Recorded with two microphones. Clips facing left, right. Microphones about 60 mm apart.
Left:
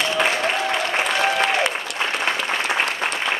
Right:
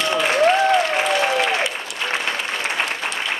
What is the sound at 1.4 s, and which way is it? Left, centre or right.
Applause, left.